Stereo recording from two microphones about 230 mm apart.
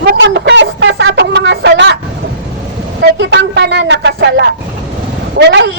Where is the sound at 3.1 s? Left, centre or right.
Right.